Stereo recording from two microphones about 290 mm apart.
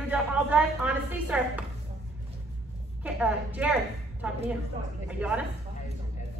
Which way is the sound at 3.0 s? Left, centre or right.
Centre.